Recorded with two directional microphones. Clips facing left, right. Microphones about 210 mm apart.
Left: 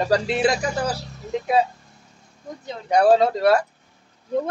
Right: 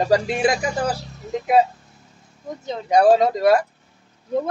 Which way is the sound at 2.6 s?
15° right (ahead or behind).